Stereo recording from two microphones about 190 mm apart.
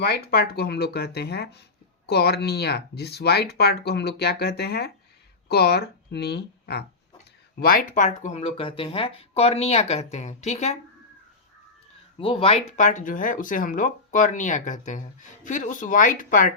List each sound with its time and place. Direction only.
0.0 s speech: 55° left (ahead or behind); by 10.8 s 35° left (ahead or behind)
12.2 s speech: 30° left (ahead or behind)